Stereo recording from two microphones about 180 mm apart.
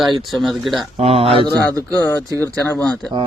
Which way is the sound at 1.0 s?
35° right (ahead or behind).